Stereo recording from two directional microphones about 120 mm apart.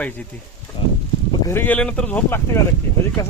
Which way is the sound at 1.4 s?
15° left (ahead or behind).